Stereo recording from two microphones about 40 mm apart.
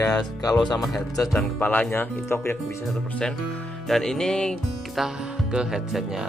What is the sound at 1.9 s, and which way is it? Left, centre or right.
Speech, left.